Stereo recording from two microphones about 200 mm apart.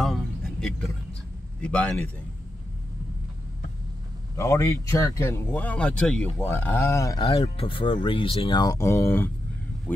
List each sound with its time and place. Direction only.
0.0 s a sound: centre (ahead or behind)
1.6 s a man's voice: 5° left (ahead or behind)
4.4 s speech: 15° left (ahead or behind)
7.2 s speech: 30° left (ahead or behind); by 10.0 s 10° left (ahead or behind)